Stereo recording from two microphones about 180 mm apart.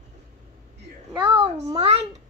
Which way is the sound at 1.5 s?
35° right (ahead or behind).